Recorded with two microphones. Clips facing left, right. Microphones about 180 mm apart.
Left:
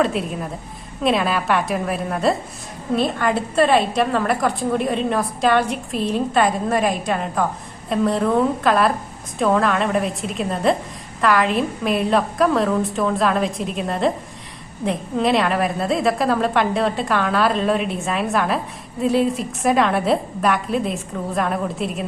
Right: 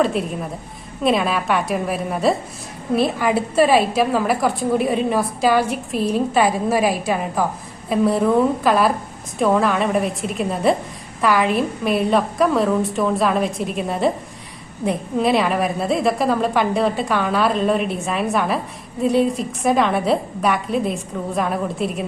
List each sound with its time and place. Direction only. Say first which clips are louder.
0.0 s a woman's voice: right 1 dB; centre (ahead or behind)